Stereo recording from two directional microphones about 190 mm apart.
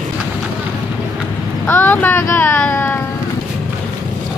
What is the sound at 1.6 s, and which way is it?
Speech, 10° left (ahead or behind).